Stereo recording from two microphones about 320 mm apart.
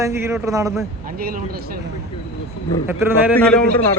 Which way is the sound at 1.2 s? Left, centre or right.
Right.